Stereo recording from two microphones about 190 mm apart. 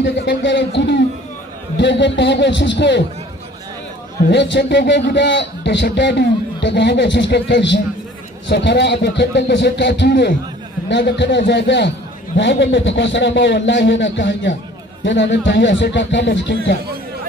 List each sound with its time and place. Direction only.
0.0 s a man's voice: 70° left (ahead or behind)
4.3 s a man's voice: 65° left (ahead or behind)